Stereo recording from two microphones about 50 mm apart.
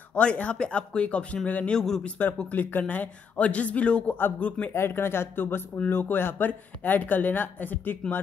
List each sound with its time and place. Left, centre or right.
0.1 s speech: left
1.7 s speech: centre
2.5 s speech: left
4.7 s speech: left